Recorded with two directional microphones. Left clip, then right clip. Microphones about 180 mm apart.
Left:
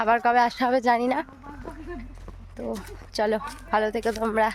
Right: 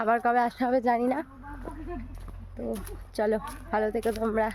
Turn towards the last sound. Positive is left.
turn(degrees=0)  # may be behind; listen again after turning